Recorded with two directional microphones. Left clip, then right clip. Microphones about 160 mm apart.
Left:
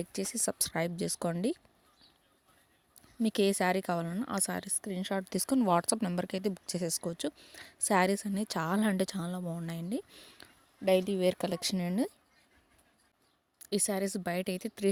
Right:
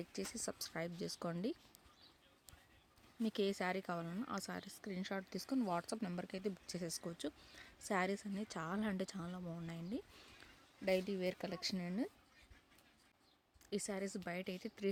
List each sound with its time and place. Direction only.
0.0 s a woman's voice: 60° left (ahead or behind)
3.2 s a woman's voice: 60° left (ahead or behind)
13.6 s a woman's voice: 65° left (ahead or behind)